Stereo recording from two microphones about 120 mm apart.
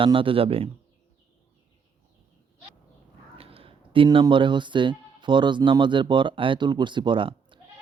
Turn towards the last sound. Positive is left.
turn(degrees=-45)  # may be behind; listen again after turning